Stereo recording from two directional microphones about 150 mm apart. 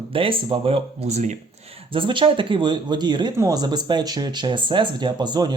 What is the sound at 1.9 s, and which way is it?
Speech, 35° right (ahead or behind).